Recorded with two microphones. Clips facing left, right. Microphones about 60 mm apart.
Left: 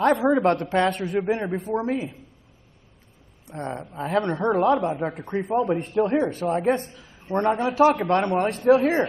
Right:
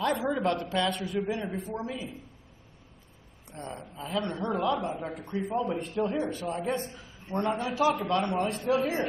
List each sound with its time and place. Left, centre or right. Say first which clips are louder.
0.0 s a woman's voice: left 9 dB; left
0.4 s a woman's voice: left 7 dB; left
0.7 s a woman's voice: left 7 dB; left
3.5 s a woman's voice: left 9 dB; left
7.3 s a man's voice: left 7 dB; left
7.7 s a woman's voice: left 7 dB; left